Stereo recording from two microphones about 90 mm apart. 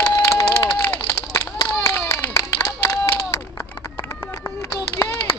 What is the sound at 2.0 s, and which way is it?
Clapping, 25° left (ahead or behind).